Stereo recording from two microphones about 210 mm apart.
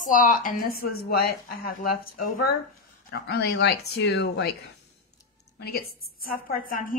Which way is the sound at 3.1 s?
50° left (ahead or behind).